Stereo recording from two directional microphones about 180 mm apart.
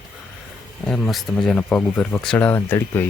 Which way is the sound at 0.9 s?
Centre (ahead or behind).